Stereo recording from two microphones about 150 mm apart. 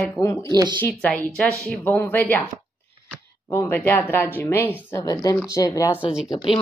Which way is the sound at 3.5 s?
15° left (ahead or behind).